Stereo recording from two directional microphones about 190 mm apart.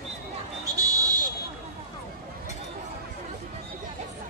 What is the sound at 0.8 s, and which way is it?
Buzzer, 20° right (ahead or behind).